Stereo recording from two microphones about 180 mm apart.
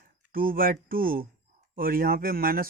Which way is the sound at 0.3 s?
55° right (ahead or behind).